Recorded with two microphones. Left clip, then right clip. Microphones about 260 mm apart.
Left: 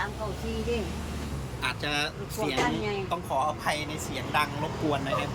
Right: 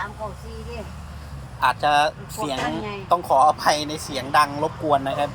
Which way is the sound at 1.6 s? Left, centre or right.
Centre.